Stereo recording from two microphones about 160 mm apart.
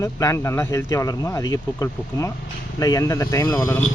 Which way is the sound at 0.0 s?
20° left (ahead or behind).